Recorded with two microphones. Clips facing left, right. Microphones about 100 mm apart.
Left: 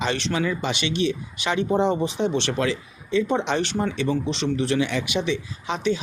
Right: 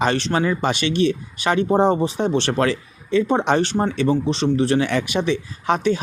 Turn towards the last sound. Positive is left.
turn(degrees=-50)  # may be behind; listen again after turning